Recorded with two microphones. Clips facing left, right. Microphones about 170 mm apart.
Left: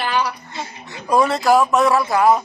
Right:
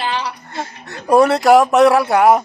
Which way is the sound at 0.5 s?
55° right (ahead or behind).